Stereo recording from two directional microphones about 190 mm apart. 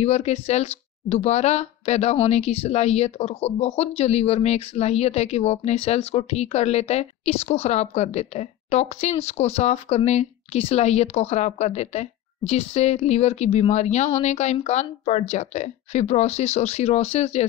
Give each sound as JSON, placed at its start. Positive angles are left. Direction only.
{"t": 0.0, "sound": "a woman's voice", "side_deg": 35}